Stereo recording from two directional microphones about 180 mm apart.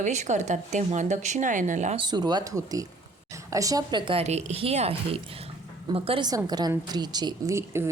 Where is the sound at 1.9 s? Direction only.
25° right (ahead or behind).